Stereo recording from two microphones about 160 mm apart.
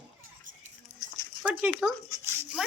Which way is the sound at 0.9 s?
5° right (ahead or behind).